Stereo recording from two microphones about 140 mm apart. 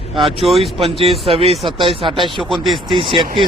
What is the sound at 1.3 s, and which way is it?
Speech, 40° right (ahead or behind).